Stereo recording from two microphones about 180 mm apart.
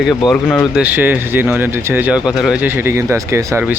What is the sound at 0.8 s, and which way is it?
Speech, 10° right (ahead or behind).